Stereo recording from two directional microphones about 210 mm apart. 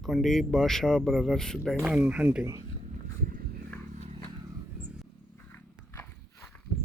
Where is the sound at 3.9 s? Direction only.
30° right (ahead or behind).